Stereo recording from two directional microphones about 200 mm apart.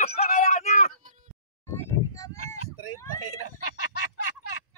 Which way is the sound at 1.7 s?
15° left (ahead or behind).